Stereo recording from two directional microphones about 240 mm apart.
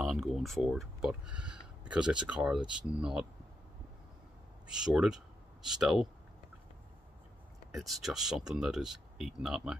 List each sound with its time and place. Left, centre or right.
0.0 s speech: centre
4.6 s speech: centre
7.7 s speech: centre